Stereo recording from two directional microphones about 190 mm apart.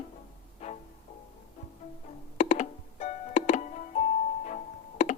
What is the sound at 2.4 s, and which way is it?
Music, 40° left (ahead or behind).